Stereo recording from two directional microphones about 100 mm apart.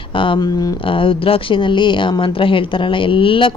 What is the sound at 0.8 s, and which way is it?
Speech, 60° left (ahead or behind).